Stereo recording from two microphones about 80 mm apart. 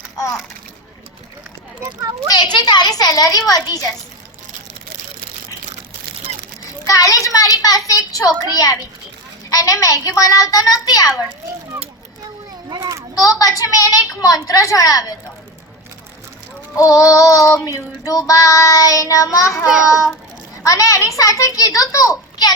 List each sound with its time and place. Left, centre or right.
2.3 s child singing: left
6.8 s child singing: left
9.5 s a child's voice: left
10.1 s child singing: left
12.7 s children playing: right
13.2 s child singing: left
16.7 s child singing: left
20.7 s child singing: left